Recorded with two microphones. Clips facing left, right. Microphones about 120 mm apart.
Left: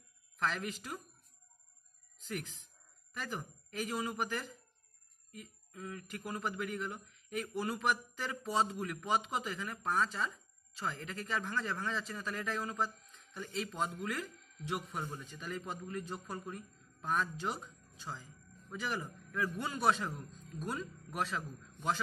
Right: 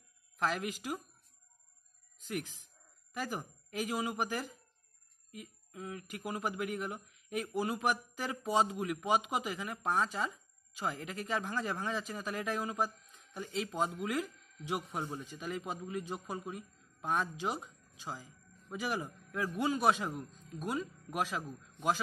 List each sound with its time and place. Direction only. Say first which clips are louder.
0.4 s speech: right 2 dB; 10° right (ahead or behind)
3.1 s telephone bell ringing: right 4 dB; 10° right (ahead or behind)
3.8 s speech: right 2 dB; 10° right (ahead or behind)